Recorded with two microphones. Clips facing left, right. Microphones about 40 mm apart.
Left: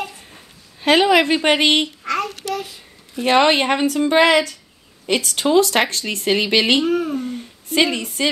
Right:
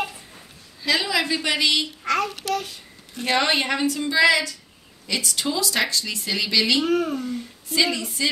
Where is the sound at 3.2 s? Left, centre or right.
Left.